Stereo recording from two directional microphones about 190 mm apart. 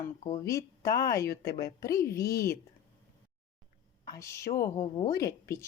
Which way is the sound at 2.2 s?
55° left (ahead or behind).